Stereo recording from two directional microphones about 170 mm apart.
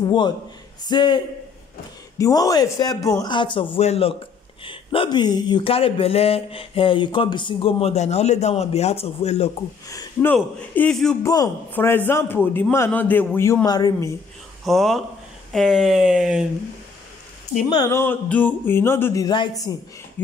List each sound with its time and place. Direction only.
0.0 s a man's voice: 25° left (ahead or behind)
9.8 s speech: 20° left (ahead or behind)
10.3 s speech: 5° left (ahead or behind)
11.2 s speech: 20° left (ahead or behind)
14.6 s speech: centre (ahead or behind)
17.6 s speech: 20° left (ahead or behind)